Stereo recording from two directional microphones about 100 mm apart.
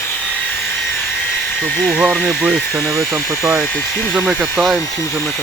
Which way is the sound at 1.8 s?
10° right (ahead or behind).